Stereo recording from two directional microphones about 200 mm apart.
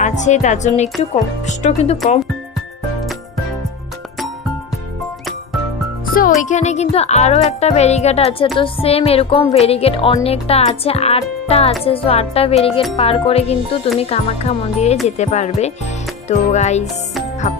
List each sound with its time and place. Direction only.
0.0 s speech: 35° left (ahead or behind)
6.4 s speech: 35° left (ahead or behind)